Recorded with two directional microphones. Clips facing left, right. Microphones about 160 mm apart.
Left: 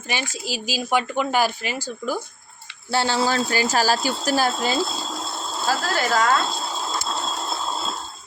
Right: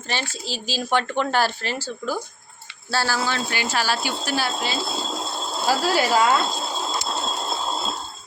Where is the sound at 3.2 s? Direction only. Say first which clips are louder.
Left 4 dB; 40° left (ahead or behind).